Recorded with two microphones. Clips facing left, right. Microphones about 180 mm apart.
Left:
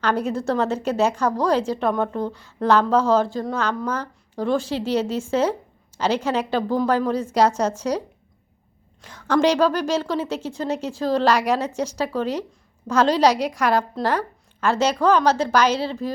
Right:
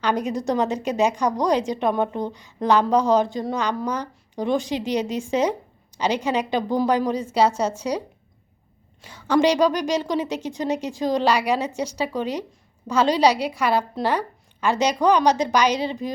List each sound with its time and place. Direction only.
0.0 s a woman's voice: 15° right (ahead or behind)